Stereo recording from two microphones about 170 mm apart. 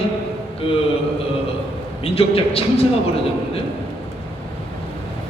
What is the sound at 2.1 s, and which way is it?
Speech, 35° left (ahead or behind).